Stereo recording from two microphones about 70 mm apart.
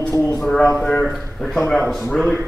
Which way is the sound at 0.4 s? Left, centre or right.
Centre.